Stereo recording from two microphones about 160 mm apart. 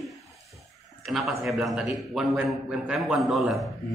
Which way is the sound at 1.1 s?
Centre (ahead or behind).